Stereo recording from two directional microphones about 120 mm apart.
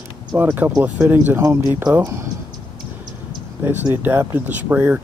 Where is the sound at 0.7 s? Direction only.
10° right (ahead or behind).